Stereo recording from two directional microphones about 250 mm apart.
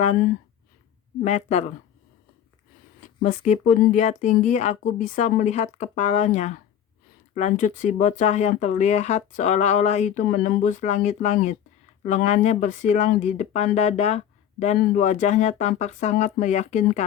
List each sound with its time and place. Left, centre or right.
0.0 s speech: left
3.2 s speech: left